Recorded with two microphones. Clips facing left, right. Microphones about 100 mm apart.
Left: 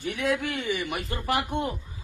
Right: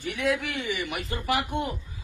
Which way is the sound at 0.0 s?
40° left (ahead or behind).